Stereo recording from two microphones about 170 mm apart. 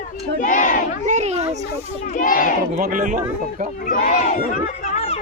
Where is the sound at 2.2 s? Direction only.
50° left (ahead or behind).